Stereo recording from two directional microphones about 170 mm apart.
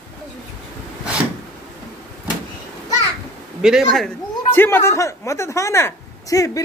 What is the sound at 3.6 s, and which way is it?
Speech, centre (ahead or behind).